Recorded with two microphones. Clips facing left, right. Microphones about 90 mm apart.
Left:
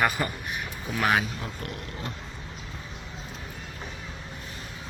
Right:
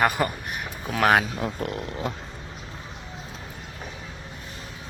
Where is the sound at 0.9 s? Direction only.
90° right.